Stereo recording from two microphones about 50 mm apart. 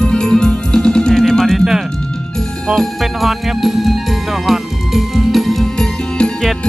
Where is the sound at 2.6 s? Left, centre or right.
Centre.